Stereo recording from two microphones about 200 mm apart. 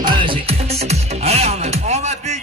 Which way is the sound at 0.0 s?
25° right (ahead or behind).